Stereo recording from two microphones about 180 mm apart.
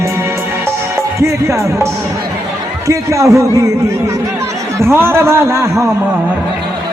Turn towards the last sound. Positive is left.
turn(degrees=-15)  # may be behind; listen again after turning